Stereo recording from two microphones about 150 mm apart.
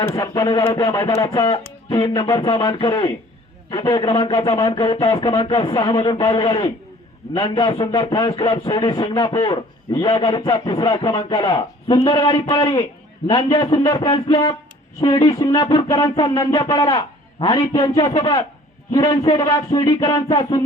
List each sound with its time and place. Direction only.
0.1 s a man's voice: 25° left (ahead or behind)
4.0 s speech: 35° left (ahead or behind)
4.4 s a man's voice: 25° left (ahead or behind)